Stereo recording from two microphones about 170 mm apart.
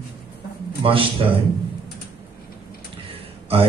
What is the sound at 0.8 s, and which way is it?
Speech, 30° right (ahead or behind).